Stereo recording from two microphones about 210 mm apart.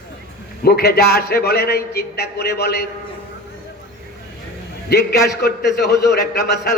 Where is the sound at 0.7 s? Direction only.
50° left (ahead or behind).